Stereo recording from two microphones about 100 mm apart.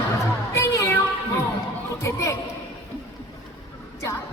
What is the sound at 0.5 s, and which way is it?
Music, 25° left (ahead or behind).